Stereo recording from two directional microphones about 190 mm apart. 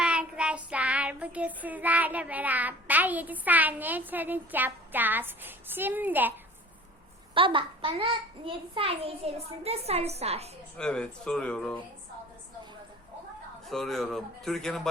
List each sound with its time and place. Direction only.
0.0 s child singing: 5° right (ahead or behind)
7.3 s a child's voice: 25° right (ahead or behind)
10.8 s a man's voice: 5° left (ahead or behind)
13.7 s a man's voice: centre (ahead or behind)